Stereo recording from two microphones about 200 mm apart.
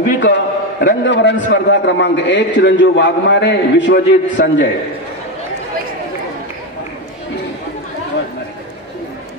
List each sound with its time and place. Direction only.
0.2 s a man's voice: 55° left (ahead or behind)